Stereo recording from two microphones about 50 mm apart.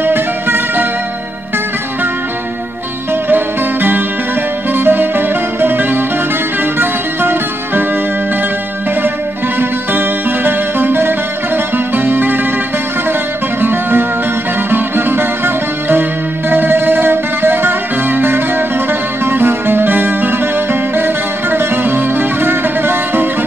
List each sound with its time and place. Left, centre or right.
0.0 s music: right
3.3 s music: right
9.6 s music: right
13.6 s music: right